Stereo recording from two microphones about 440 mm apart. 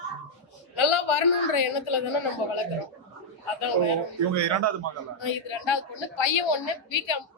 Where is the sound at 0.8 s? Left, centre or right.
Left.